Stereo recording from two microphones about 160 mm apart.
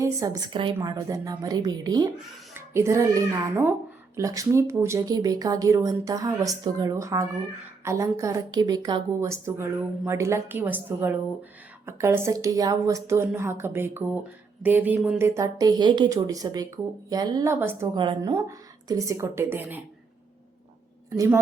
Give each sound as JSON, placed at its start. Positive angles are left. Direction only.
{"t": 0.0, "sound": "a woman's voice", "side_deg": -20}
{"t": 17.9, "sound": "a woman's voice", "side_deg": -30}